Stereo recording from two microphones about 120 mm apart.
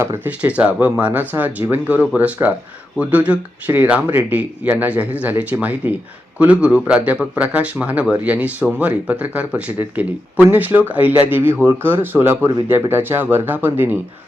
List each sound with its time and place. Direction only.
0.0 s speech: 15° right (ahead or behind)